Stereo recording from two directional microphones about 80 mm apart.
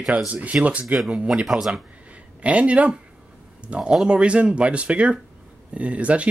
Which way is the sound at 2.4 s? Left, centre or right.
Centre.